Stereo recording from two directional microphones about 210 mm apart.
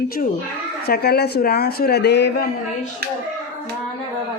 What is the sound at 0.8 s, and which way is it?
Speech, 50° left (ahead or behind).